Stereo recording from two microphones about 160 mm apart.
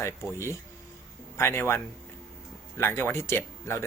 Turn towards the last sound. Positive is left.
turn(degrees=15)  # may be behind; listen again after turning